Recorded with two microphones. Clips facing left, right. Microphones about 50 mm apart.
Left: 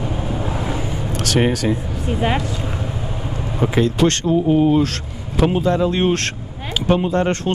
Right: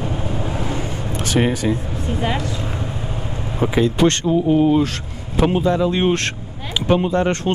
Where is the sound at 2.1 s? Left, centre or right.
Left.